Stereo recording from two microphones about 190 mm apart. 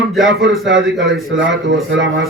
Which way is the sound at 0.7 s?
75° right (ahead or behind).